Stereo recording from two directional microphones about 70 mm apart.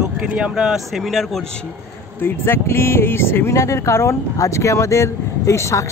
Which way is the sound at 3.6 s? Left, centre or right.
Left.